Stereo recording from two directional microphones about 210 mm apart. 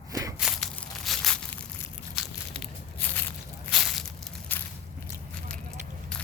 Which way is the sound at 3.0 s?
10° left (ahead or behind).